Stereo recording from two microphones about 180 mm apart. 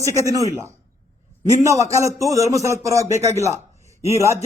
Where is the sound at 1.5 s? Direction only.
15° right (ahead or behind).